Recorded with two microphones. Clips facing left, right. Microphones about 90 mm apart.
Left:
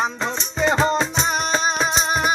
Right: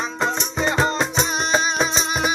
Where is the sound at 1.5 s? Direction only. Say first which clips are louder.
Right 2 dB; 45° left (ahead or behind).